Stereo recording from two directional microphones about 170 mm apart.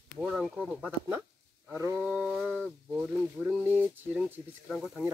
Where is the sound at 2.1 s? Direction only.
5° right (ahead or behind).